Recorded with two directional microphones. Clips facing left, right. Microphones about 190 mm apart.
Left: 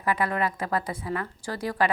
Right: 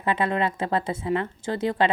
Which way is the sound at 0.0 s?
25° right (ahead or behind).